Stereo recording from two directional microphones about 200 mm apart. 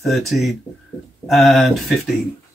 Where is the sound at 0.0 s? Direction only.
Centre (ahead or behind).